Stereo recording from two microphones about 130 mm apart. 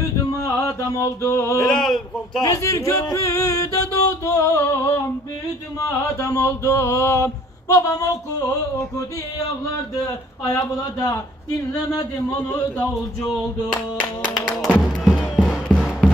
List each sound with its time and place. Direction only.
0.3 s music: 25° left (ahead or behind)
1.6 s a man's voice: 5° left (ahead or behind)
2.4 s mantra: 25° left (ahead or behind)
10.5 s mantra: 25° left (ahead or behind)
14.3 s a man's voice: centre (ahead or behind)
15.0 s music: centre (ahead or behind)